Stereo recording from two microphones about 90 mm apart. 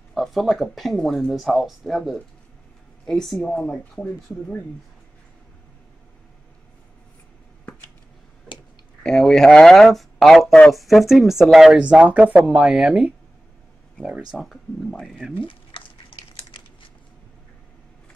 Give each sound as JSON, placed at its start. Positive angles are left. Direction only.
{"t": 0.1, "sound": "speech", "side_deg": 0}
{"t": 9.0, "sound": "speech", "side_deg": 5}
{"t": 14.0, "sound": "speech", "side_deg": 15}
{"t": 14.3, "sound": "speech", "side_deg": 0}
{"t": 15.3, "sound": "speech", "side_deg": 80}